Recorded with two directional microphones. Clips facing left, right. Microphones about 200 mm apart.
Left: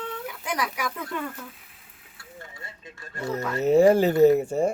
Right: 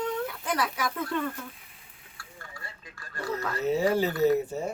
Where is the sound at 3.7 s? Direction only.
50° left (ahead or behind).